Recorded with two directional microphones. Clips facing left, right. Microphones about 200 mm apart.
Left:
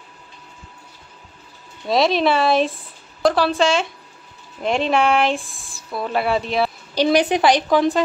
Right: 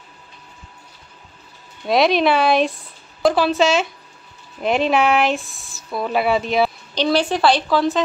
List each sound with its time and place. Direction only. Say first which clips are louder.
1.9 s speech: right 1 dB; centre (ahead or behind)
7.0 s speech: left 2 dB; 15° left (ahead or behind)